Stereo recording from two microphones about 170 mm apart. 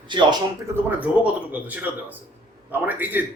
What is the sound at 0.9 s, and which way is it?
Speech, 10° right (ahead or behind).